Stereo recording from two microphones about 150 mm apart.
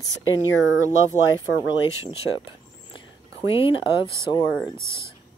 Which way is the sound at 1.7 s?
35° left (ahead or behind).